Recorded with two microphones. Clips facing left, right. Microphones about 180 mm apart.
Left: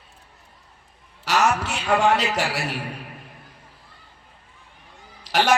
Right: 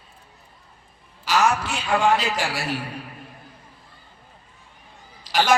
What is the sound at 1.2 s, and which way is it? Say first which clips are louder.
A man's voice: even; 70° left (ahead or behind).